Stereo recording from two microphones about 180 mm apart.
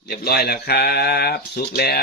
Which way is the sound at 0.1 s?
60° left (ahead or behind).